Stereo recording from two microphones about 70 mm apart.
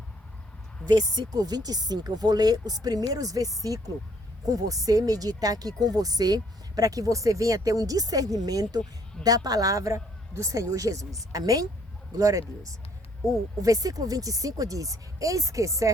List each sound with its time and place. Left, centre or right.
0.9 s speech: right